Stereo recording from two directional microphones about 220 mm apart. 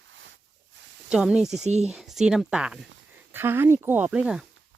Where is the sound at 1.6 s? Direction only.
30° right (ahead or behind).